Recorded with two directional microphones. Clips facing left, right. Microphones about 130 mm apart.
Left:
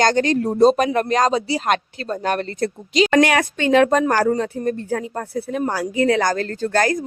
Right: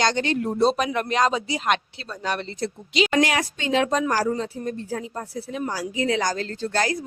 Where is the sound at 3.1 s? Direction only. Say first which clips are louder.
Left 7 dB; 60° left (ahead or behind).